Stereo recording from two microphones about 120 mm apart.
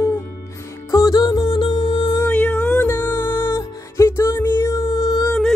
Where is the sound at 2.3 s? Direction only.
15° left (ahead or behind); by 5.3 s 30° left (ahead or behind).